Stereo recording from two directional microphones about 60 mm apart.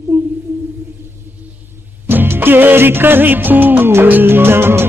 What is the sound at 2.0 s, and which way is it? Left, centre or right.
Music of bollywood, right.